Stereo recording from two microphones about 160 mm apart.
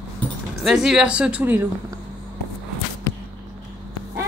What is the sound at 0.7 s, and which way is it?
A woman's voice, 5° right (ahead or behind).